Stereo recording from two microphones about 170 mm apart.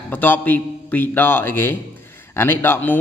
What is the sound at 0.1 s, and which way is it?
A man's voice, 10° left (ahead or behind).